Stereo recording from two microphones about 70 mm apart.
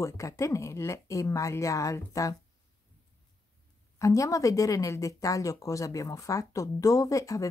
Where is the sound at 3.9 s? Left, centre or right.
Left.